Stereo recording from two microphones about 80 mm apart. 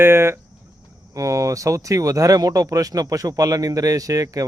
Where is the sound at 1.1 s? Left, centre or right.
Right.